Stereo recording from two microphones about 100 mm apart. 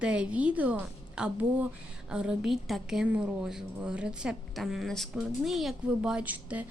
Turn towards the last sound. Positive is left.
turn(degrees=-15)  # may be behind; listen again after turning